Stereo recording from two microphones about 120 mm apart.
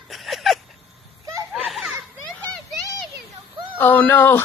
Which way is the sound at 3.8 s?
15° left (ahead or behind).